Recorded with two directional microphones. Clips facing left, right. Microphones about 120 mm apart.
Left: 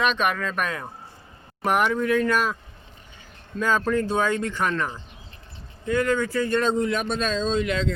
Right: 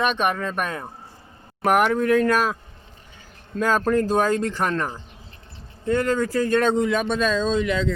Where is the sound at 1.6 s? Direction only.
55° right (ahead or behind).